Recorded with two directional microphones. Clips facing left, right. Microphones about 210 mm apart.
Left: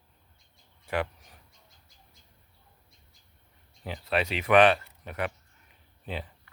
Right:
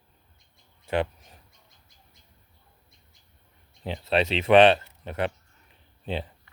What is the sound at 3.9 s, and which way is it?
Speech, 25° right (ahead or behind).